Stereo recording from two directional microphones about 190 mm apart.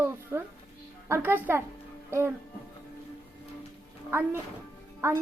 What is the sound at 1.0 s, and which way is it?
A woman's voice, 15° right (ahead or behind).